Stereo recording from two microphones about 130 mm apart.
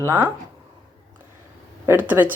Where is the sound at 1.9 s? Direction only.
15° right (ahead or behind).